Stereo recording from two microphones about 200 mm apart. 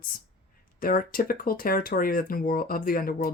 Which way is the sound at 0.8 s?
45° left (ahead or behind).